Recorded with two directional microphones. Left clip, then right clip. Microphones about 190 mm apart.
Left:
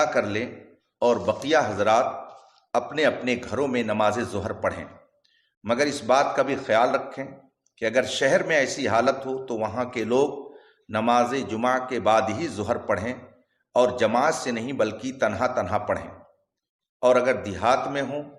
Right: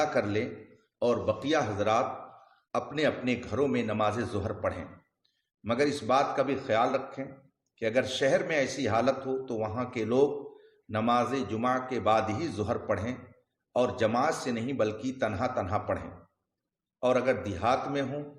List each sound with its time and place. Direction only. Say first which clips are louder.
0.0 s a man's voice: left 5 dB; 15° left (ahead or behind)